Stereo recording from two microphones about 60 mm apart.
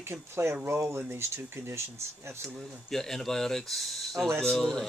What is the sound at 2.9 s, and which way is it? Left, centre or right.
A man's voice, centre.